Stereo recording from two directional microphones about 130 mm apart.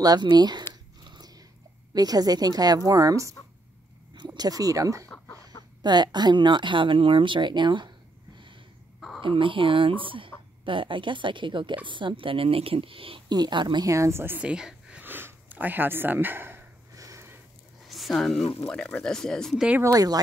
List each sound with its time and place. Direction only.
0.0 s a woman's voice: 30° right (ahead or behind)
1.0 s dog: 35° right (ahead or behind)
2.0 s a woman's voice: 30° right (ahead or behind)
9.2 s a woman's voice: 40° right (ahead or behind); by 17.4 s 25° right (ahead or behind)
17.8 s speech: centre (ahead or behind)
19.8 s a woman's voice: 30° right (ahead or behind)